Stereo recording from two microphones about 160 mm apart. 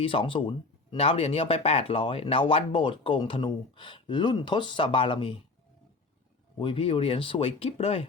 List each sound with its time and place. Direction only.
0.0 s speech: 35° left (ahead or behind)
6.6 s speech: 35° left (ahead or behind)